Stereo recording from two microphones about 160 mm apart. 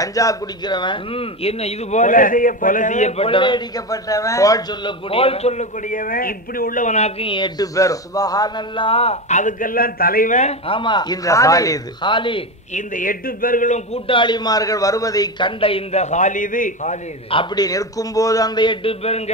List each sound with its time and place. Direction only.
0.0 s speech: 20° left (ahead or behind)
5.1 s a man's voice: 35° left (ahead or behind); by 10.5 s 55° left (ahead or behind)
10.7 s a man's voice: 30° left (ahead or behind)
12.7 s a man's voice: 55° left (ahead or behind)
13.9 s speech: 35° left (ahead or behind); by 16.9 s 55° left (ahead or behind)
17.3 s a man's voice: 30° left (ahead or behind)